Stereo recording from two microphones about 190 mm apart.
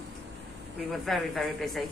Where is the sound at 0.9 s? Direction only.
Centre (ahead or behind).